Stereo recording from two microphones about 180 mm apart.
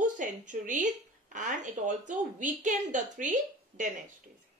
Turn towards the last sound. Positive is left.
turn(degrees=-45)  # may be behind; listen again after turning